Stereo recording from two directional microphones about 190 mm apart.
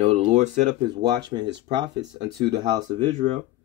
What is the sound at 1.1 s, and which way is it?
Speech, 20° right (ahead or behind).